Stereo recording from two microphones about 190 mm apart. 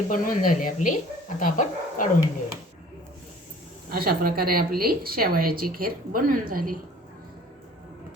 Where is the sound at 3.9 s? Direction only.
50° right (ahead or behind).